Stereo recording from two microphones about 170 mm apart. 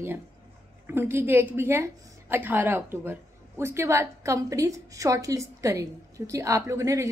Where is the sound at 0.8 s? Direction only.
15° right (ahead or behind).